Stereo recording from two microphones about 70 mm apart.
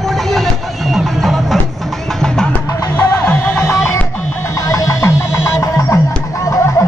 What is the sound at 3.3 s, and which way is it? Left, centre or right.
Music, left.